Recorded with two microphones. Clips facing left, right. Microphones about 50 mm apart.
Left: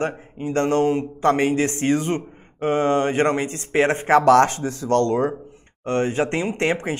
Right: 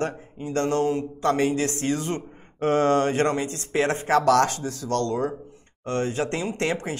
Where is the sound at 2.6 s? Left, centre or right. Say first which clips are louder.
Left 1 dB; centre.